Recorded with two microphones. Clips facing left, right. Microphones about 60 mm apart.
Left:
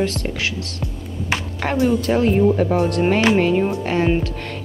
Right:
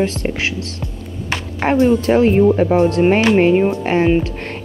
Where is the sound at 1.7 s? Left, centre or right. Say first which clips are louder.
Right 5 dB; right.